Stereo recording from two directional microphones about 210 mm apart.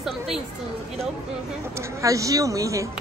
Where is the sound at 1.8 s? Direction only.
15° right (ahead or behind).